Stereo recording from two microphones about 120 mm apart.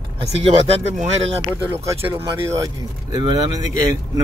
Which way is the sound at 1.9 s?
25° right (ahead or behind).